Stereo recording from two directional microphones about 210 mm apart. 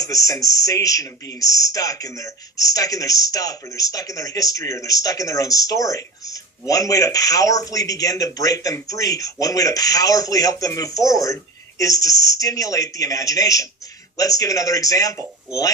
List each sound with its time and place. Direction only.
0.0 s a man's voice: 15° left (ahead or behind)